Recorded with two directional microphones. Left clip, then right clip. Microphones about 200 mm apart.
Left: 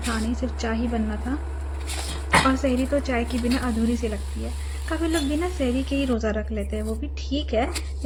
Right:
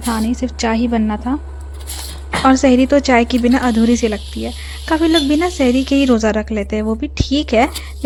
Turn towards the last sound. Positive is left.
turn(degrees=-65)  # may be behind; listen again after turning